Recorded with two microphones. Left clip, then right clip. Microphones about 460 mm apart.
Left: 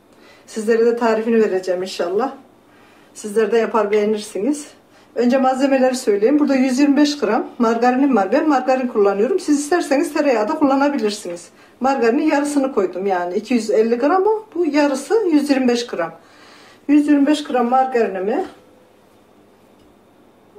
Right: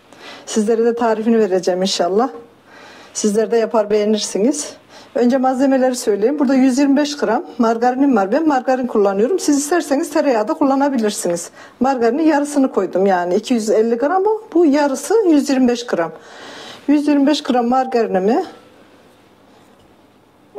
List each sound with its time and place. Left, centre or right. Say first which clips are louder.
0.5 s speech: even; right
3.1 s speech: right 1 dB; right
5.1 s speech: right 1 dB; right